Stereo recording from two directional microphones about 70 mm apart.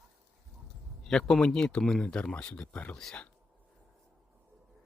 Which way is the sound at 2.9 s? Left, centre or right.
Centre.